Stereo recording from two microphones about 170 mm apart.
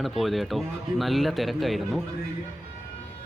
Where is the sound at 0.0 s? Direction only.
Centre (ahead or behind).